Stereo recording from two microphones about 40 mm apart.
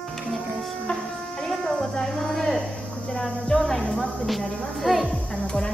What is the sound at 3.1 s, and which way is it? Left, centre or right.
Music, centre.